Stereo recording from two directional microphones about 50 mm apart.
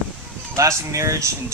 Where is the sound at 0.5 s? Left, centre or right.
Right.